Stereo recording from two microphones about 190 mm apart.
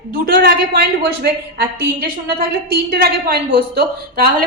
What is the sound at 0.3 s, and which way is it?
A woman's voice, 55° right (ahead or behind).